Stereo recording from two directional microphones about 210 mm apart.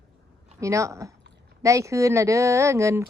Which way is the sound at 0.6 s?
15° right (ahead or behind).